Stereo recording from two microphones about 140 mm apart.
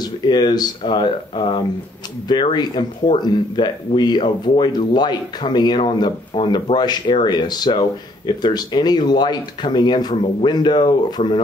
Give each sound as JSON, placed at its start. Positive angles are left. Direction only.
{"t": 0.0, "sound": "speech", "side_deg": 30}